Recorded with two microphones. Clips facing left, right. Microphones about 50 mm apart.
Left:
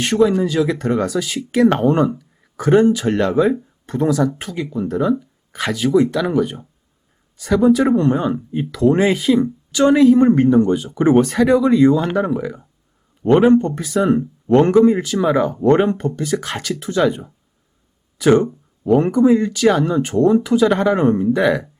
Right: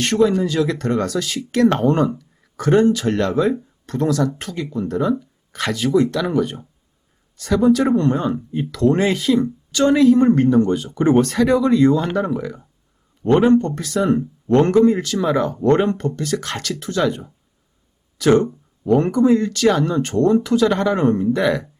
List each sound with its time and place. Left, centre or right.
0.0 s speech: centre